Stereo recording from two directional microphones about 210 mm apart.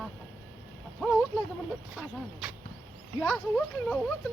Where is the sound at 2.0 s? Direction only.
5° right (ahead or behind).